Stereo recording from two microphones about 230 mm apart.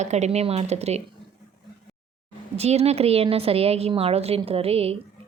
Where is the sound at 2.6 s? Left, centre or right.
Right.